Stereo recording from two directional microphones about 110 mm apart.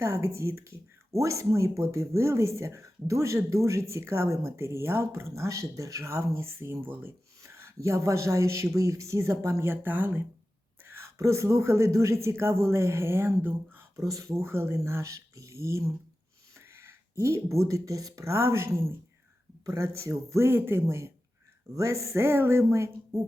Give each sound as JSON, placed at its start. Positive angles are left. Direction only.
{"t": 0.0, "sound": "speech", "side_deg": -25}